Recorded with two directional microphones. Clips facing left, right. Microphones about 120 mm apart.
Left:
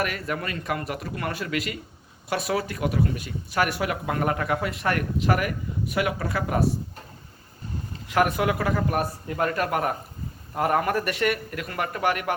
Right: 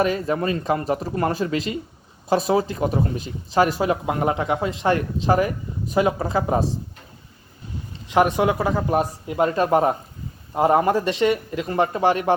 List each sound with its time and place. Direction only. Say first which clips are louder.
0.0 s speech: right 7 dB; 25° right (ahead or behind)
8.0 s speech: right 4 dB; 20° right (ahead or behind)